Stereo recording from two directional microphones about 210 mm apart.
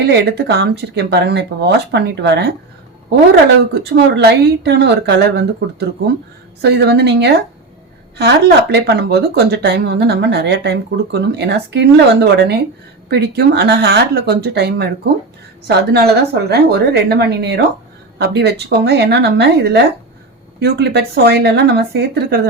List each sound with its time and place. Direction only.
0.1 s speech: 50° right (ahead or behind)
3.8 s speech: 50° right (ahead or behind)
6.6 s speech: 50° right (ahead or behind)